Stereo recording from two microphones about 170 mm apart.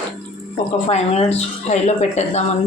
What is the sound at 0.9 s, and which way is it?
Speech, 40° left (ahead or behind).